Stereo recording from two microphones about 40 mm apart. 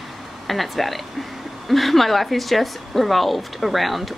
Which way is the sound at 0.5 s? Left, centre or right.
Centre.